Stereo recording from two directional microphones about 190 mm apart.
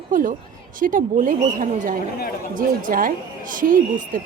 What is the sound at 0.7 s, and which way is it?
A woman's voice, 45° right (ahead or behind).